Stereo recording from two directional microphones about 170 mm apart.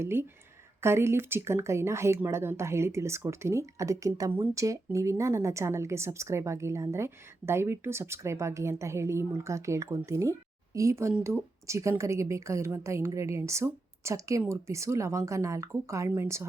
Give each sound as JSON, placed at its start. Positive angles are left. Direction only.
{"t": 0.0, "sound": "speech", "side_deg": -15}